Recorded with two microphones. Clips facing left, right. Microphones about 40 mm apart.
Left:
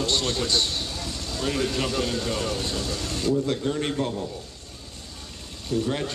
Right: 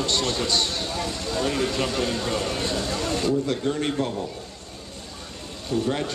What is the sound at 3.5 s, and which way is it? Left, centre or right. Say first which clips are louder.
Speech: right 1 dB; centre.